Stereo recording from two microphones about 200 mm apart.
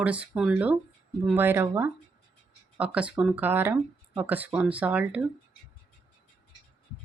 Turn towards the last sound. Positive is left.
turn(degrees=-5)  # may be behind; listen again after turning